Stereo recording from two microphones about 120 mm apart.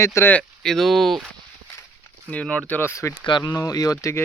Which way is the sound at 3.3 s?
35° left (ahead or behind).